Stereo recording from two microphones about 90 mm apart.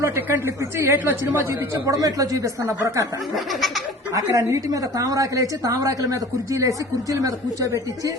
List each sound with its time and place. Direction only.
0.0 s a woman's voice: 30° right (ahead or behind)
3.3 s laughter: centre (ahead or behind)
4.1 s a woman's voice: 40° right (ahead or behind)